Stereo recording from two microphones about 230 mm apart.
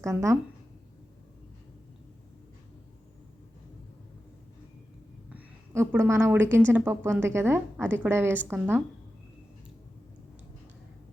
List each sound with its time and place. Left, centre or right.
0.0 s a woman's voice: centre
5.3 s a woman's voice: centre